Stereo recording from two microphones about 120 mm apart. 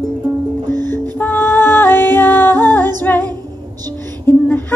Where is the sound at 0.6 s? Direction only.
35° right (ahead or behind).